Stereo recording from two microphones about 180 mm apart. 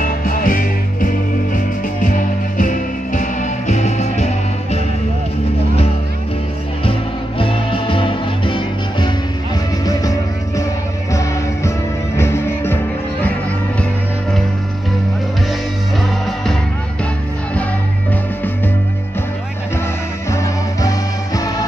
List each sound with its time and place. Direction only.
0.0 s music: 50° left (ahead or behind)
6.8 s music: 30° left (ahead or behind); by 12.7 s 15° left (ahead or behind)
20.2 s music: 15° left (ahead or behind)